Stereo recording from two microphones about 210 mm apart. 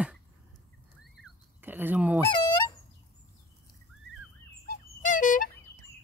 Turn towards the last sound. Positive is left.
turn(degrees=40)  # may be behind; listen again after turning